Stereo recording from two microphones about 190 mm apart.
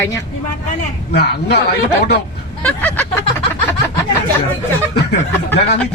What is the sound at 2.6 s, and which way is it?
Vehicle, 10° left (ahead or behind).